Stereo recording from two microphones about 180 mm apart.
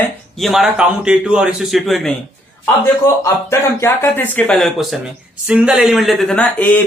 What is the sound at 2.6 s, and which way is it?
Speech, 15° left (ahead or behind).